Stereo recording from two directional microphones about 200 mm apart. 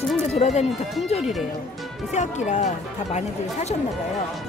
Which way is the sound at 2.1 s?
35° left (ahead or behind).